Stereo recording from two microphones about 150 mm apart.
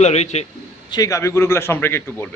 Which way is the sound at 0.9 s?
20° left (ahead or behind).